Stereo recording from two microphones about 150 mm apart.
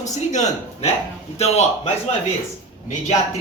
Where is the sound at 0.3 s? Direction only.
50° left (ahead or behind).